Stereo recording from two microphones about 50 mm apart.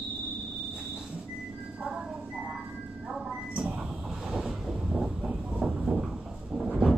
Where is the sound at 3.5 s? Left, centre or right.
Right.